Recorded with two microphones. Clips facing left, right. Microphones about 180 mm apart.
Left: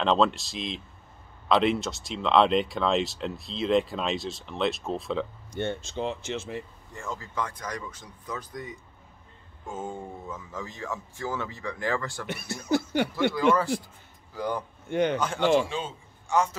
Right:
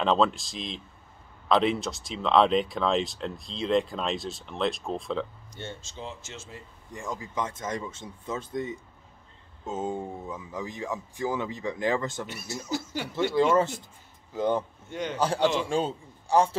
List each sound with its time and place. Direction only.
0.0 s speech: centre (ahead or behind)
5.5 s speech: 60° left (ahead or behind)
6.9 s speech: 15° right (ahead or behind)
12.3 s speech: 60° left (ahead or behind)
13.3 s speech: 30° right (ahead or behind)
14.9 s speech: 60° left (ahead or behind)
15.1 s speech: 35° right (ahead or behind)
15.4 s a man's voice: 50° left (ahead or behind)
15.7 s a man's voice: 35° right (ahead or behind)